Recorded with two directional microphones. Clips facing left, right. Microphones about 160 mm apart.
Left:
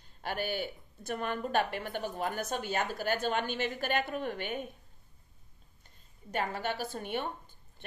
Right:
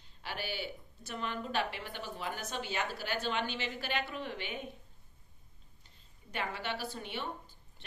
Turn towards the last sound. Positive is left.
turn(degrees=50)  # may be behind; listen again after turning